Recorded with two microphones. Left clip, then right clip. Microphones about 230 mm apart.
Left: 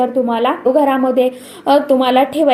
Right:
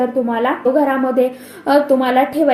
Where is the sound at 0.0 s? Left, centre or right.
Left.